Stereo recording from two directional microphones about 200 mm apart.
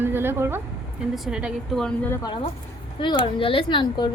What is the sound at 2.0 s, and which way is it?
Speech, 20° left (ahead or behind).